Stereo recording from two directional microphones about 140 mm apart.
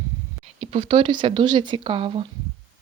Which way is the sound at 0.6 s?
45° right (ahead or behind).